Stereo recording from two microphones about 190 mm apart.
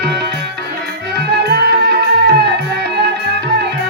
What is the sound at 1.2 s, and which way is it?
Music, 60° right (ahead or behind).